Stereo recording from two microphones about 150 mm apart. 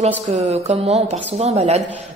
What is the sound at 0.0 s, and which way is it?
A woman's voice, 45° right (ahead or behind).